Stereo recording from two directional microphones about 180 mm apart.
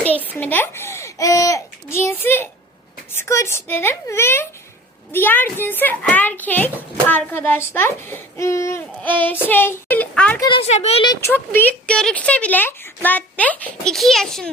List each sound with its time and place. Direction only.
0.0 s a child's voice: 10° left (ahead or behind)
10.4 s speech: 30° left (ahead or behind)
11.0 s speech: 20° left (ahead or behind); by 14.5 s centre (ahead or behind)